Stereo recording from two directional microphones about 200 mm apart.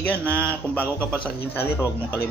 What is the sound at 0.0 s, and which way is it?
Speech, 10° left (ahead or behind).